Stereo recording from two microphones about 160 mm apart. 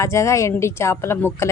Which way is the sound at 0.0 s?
20° left (ahead or behind).